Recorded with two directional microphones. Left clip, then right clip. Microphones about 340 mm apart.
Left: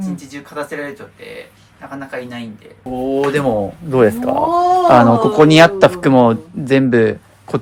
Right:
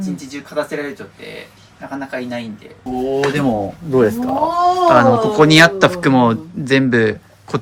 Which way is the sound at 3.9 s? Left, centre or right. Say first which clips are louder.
Left 2 dB; centre.